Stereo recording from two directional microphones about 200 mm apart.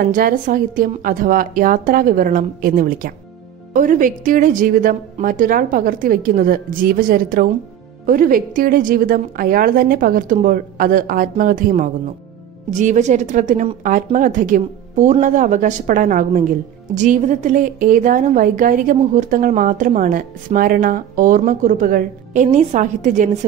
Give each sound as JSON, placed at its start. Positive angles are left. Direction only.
{"t": 0.1, "sound": "a woman's voice", "side_deg": -45}